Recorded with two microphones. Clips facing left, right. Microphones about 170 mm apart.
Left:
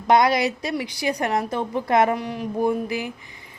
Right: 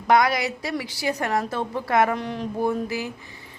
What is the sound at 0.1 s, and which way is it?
A woman's voice, 20° left (ahead or behind).